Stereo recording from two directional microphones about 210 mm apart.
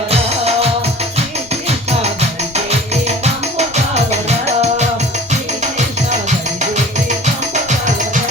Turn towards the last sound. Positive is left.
turn(degrees=-35)  # may be behind; listen again after turning